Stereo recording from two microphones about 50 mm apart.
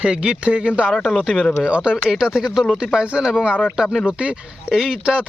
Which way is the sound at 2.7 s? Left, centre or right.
Centre.